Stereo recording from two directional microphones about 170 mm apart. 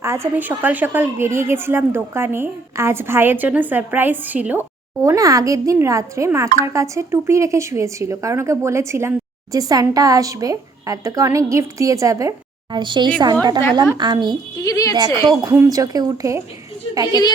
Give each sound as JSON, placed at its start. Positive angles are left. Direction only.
{"t": 0.0, "sound": "a woman's voice", "side_deg": -15}
{"t": 5.0, "sound": "speech", "side_deg": -20}
{"t": 14.6, "sound": "a woman's voice", "side_deg": 20}
{"t": 14.9, "sound": "speech", "side_deg": -25}
{"t": 17.1, "sound": "a woman's voice", "side_deg": 25}